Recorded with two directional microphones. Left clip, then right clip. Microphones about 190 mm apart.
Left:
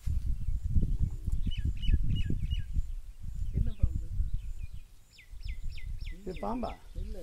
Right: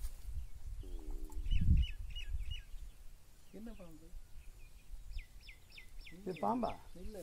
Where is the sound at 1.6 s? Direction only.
55° left (ahead or behind).